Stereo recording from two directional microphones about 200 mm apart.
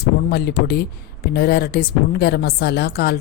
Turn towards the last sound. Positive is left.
turn(degrees=55)  # may be behind; listen again after turning